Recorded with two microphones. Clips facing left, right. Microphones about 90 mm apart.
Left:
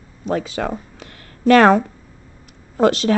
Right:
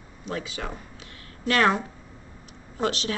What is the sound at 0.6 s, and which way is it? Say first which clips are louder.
Speech: left 11 dB; 90° left.